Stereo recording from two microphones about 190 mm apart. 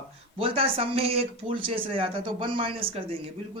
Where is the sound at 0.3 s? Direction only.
30° right (ahead or behind).